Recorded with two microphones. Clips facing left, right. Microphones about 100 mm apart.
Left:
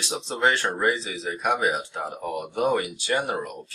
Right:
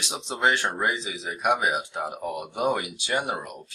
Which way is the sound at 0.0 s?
15° right (ahead or behind).